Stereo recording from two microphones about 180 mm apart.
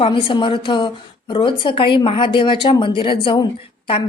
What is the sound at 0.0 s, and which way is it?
A woman's voice, 25° left (ahead or behind).